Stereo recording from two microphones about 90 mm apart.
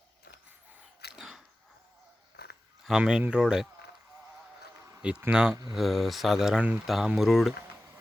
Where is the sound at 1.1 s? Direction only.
5° right (ahead or behind).